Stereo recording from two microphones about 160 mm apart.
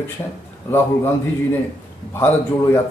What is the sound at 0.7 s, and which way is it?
Speech, 15° left (ahead or behind).